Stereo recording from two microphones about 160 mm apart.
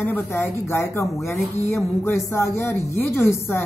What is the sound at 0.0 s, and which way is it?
A woman's voice, 10° left (ahead or behind).